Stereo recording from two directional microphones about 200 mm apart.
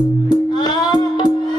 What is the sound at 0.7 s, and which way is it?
Music, 20° left (ahead or behind).